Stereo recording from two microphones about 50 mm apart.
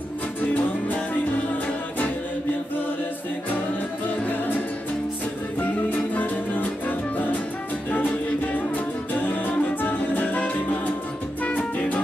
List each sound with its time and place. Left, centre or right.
0.4 s music: left
4.2 s music: left
5.9 s music: left
8.5 s music: left